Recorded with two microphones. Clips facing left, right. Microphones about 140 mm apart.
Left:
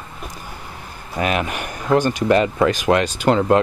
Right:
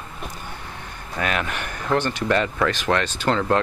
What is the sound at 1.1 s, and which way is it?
Speech, 15° left (ahead or behind).